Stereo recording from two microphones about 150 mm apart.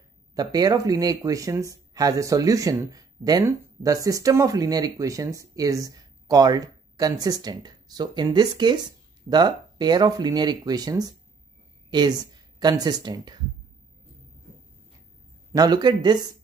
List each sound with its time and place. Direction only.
0.3 s speech: 25° right (ahead or behind)
15.5 s speech: 25° right (ahead or behind)